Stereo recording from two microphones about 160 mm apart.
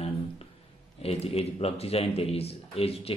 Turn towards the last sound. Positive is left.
turn(degrees=35)  # may be behind; listen again after turning